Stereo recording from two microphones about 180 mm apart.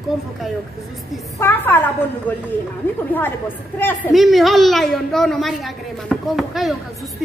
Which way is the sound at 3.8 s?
10° left (ahead or behind).